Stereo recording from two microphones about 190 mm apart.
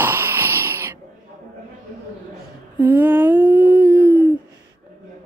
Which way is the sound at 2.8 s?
10° right (ahead or behind).